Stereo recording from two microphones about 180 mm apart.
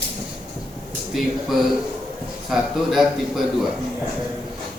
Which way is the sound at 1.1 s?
Centre (ahead or behind).